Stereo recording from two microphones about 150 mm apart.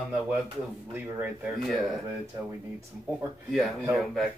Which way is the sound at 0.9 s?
10° right (ahead or behind).